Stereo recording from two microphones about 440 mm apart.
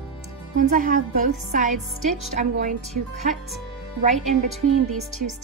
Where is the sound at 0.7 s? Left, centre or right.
Centre.